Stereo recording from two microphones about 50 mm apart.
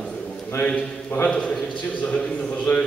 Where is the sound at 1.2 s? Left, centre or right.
Left.